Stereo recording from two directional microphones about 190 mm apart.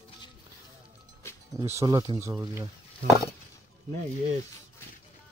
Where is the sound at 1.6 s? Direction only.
15° right (ahead or behind).